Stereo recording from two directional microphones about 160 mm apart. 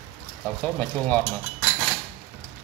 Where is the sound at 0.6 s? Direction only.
10° left (ahead or behind).